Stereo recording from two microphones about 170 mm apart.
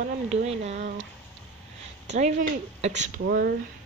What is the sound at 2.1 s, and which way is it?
Speech, 40° right (ahead or behind).